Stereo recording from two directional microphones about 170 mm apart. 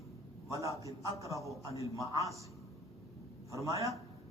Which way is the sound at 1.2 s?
20° right (ahead or behind).